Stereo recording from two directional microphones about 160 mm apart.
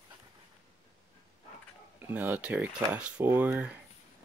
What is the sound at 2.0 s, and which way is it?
Speech, 10° right (ahead or behind).